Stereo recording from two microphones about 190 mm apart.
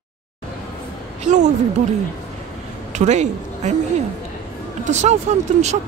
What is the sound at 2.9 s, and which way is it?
Speech, 35° right (ahead or behind).